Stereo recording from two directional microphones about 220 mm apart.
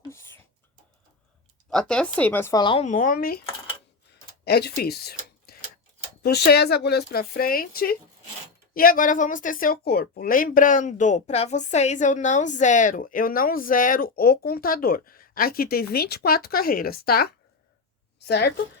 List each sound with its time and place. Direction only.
0.1 s a sound: 10° left (ahead or behind)
1.7 s speech: 5° left (ahead or behind); by 3.4 s 45° left (ahead or behind)
4.4 s a woman's voice: 45° left (ahead or behind)